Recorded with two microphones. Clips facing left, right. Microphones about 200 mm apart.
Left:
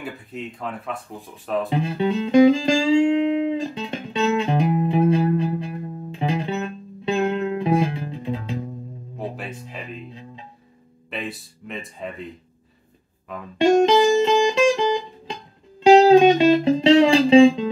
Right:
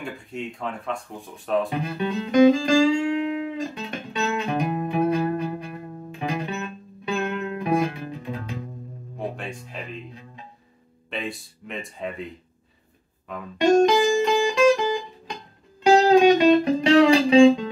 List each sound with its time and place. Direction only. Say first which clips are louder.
0.0 s speech: even; centre (ahead or behind)
1.7 s music: left 5 dB; 25° left (ahead or behind)
9.4 s music: left 1 dB; 5° left (ahead or behind)
11.1 s a sound: even; centre (ahead or behind)
13.3 s music: even; centre (ahead or behind)
13.8 s music: left 3 dB; 25° left (ahead or behind)